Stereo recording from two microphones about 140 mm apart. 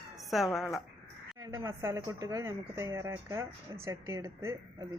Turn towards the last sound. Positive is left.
turn(degrees=-25)  # may be behind; listen again after turning